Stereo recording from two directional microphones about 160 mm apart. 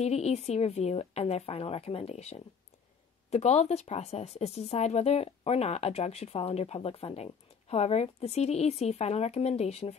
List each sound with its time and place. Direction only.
0.0 s speech: 40° left (ahead or behind)